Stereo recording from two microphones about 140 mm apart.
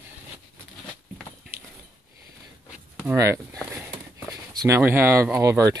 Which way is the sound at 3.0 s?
20° right (ahead or behind).